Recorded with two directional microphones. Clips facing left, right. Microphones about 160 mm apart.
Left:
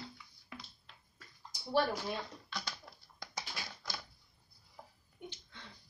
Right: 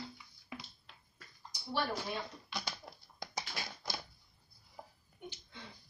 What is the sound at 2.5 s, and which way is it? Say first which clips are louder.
Dog: right 2 dB; 15° right (ahead or behind).